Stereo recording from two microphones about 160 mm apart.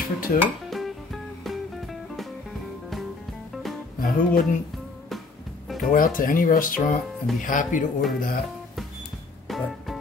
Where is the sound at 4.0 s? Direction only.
60° left (ahead or behind).